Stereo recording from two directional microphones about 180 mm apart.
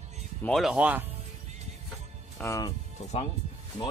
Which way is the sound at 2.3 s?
15° left (ahead or behind).